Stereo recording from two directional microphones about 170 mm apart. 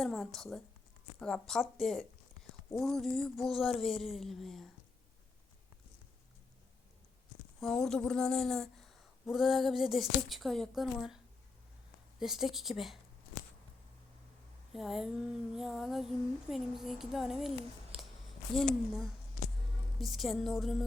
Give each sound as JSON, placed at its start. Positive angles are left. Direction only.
{"t": 0.0, "sound": "speech", "side_deg": 0}
{"t": 7.6, "sound": "speech", "side_deg": 0}
{"t": 12.2, "sound": "speech", "side_deg": 0}
{"t": 14.7, "sound": "speech", "side_deg": 0}
{"t": 20.0, "sound": "speech", "side_deg": 0}